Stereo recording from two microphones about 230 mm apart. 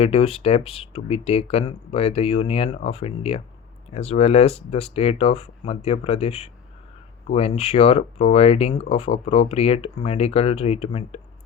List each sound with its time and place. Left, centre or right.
0.0 s speech: left